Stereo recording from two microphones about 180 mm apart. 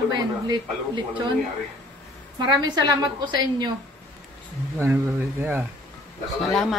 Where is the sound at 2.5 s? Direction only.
25° right (ahead or behind).